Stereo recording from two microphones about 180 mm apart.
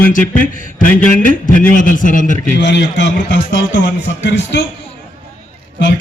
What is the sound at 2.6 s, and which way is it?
A man's voice, 75° left (ahead or behind).